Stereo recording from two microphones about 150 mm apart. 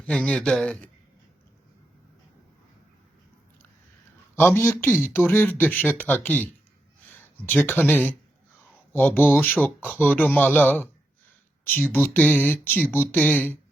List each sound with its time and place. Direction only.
0.0 s speech: 5° left (ahead or behind)
4.4 s speech: 15° left (ahead or behind)